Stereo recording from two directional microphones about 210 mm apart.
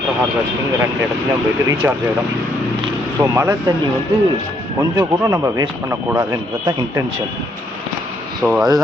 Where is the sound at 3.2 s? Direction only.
15° right (ahead or behind).